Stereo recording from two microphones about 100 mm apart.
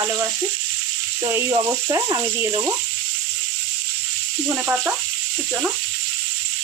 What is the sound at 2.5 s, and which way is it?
Sizzle, 30° right (ahead or behind).